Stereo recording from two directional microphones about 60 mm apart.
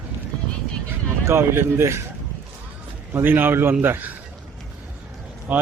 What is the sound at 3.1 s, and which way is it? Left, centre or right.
A man's voice, right.